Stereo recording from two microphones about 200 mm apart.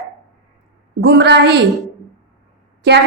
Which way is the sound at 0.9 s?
55° right (ahead or behind).